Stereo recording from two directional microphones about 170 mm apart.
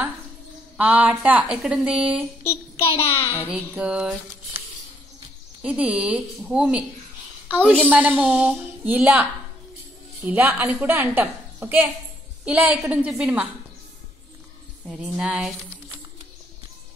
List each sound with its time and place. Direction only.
0.7 s a woman's voice: 10° right (ahead or behind)
3.1 s a child's voice: 15° left (ahead or behind)
3.4 s a woman's voice: 10° right (ahead or behind)
5.6 s a woman's voice: 10° right (ahead or behind)
14.9 s speech: 5° right (ahead or behind)